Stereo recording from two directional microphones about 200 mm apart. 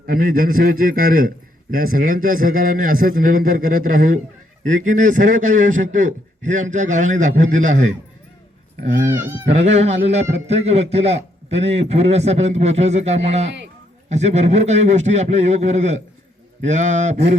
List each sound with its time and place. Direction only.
0.0 s a man's voice: 45° right (ahead or behind)
9.1 s speech: 10° right (ahead or behind)
9.5 s a man's voice: 35° right (ahead or behind)